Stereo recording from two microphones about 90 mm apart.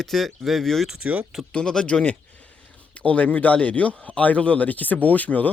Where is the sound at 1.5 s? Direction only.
10° left (ahead or behind).